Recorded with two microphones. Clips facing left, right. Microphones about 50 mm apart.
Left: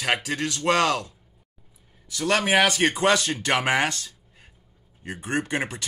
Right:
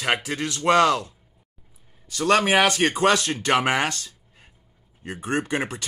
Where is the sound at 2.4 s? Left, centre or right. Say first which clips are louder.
Left 2 dB; right.